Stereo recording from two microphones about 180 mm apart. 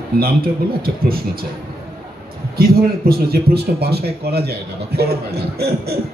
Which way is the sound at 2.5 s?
55° right (ahead or behind).